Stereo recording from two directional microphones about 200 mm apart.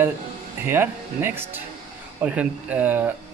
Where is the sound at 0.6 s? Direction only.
10° right (ahead or behind).